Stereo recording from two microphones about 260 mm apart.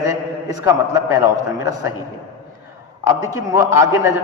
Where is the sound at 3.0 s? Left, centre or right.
Centre.